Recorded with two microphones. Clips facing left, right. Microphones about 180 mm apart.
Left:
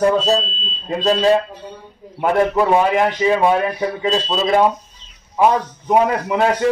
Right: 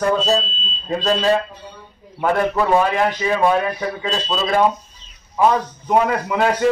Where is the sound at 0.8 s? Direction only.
20° left (ahead or behind).